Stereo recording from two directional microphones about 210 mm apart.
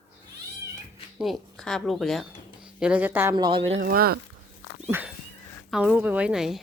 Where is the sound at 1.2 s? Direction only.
Centre (ahead or behind).